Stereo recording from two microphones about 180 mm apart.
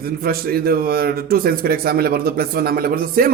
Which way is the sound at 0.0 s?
55° right (ahead or behind).